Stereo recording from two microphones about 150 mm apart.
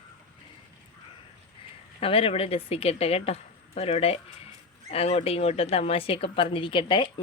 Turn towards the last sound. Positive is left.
turn(degrees=35)  # may be behind; listen again after turning